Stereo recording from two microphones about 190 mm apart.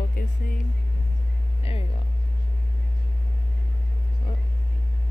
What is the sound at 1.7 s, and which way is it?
Speech, 30° left (ahead or behind).